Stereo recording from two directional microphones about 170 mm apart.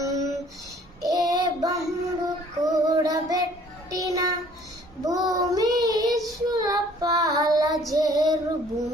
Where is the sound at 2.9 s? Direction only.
20° right (ahead or behind).